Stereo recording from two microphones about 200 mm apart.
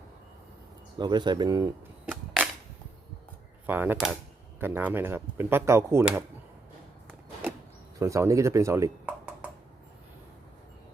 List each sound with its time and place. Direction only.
0.9 s speech: 20° right (ahead or behind)
3.7 s speech: 10° right (ahead or behind)
7.9 s speech: 15° right (ahead or behind)